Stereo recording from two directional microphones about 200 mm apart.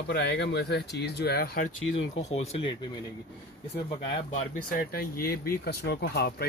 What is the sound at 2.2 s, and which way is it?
Speech, 30° left (ahead or behind).